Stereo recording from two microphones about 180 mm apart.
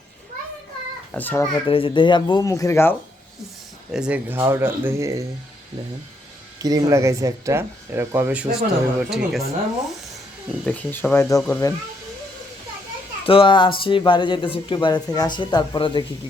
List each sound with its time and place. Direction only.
1.1 s speech: 10° left (ahead or behind)
1.6 s speech: 30° left (ahead or behind)
3.9 s speech: 5° right (ahead or behind)
6.6 s speech: 20° right (ahead or behind); by 9.4 s centre (ahead or behind)
10.7 s speech: 10° left (ahead or behind)
13.2 s speech: 30° left (ahead or behind)